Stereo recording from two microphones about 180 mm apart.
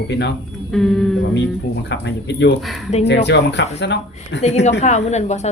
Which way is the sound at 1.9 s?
80° left.